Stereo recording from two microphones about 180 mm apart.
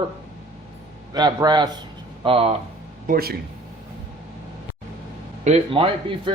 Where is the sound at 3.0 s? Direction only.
55° right (ahead or behind).